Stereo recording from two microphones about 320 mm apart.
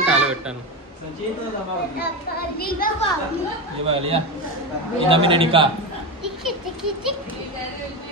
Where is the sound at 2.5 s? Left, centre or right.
Left.